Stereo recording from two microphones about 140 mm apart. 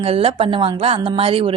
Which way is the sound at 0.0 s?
45° right (ahead or behind).